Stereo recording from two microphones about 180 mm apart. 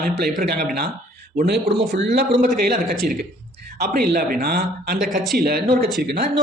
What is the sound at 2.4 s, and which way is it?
Speech, 55° right (ahead or behind).